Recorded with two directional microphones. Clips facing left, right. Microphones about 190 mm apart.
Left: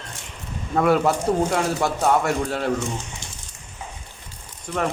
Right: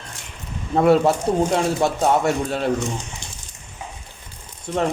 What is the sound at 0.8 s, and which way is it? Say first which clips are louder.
Speech: right 3 dB; 25° right (ahead or behind).